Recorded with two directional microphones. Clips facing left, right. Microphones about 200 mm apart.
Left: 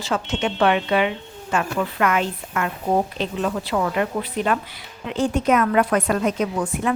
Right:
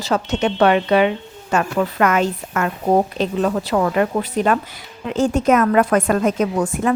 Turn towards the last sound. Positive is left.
turn(degrees=-45)  # may be behind; listen again after turning